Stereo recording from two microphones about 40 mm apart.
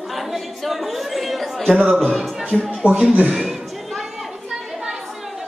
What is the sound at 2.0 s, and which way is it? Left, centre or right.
Speech, centre.